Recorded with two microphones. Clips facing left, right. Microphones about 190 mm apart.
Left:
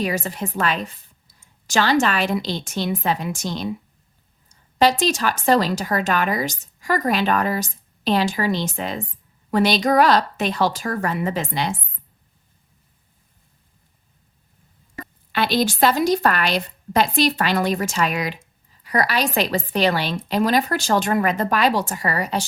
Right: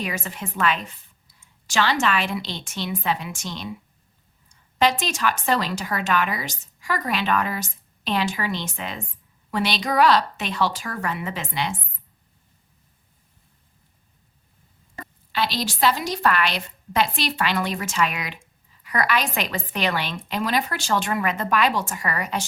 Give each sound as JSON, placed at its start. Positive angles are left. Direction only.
{"t": 0.0, "sound": "speech", "side_deg": 35}
{"t": 4.8, "sound": "speech", "side_deg": 35}
{"t": 15.3, "sound": "speech", "side_deg": 55}